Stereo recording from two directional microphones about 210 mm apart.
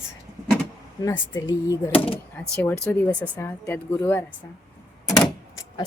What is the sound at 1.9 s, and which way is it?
Speech, 25° left (ahead or behind).